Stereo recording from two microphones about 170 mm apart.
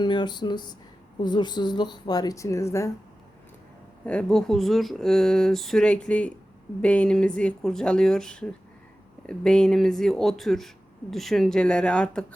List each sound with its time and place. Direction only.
0.0 s speech: 25° left (ahead or behind)
4.0 s speech: 5° left (ahead or behind)